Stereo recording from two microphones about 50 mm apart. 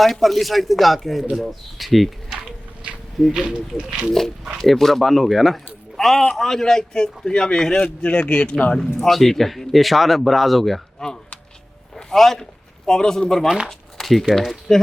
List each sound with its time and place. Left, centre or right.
0.0 s speech: centre
3.3 s speech: centre
4.2 s a man's voice: centre; by 8.8 s left
8.8 s speech: centre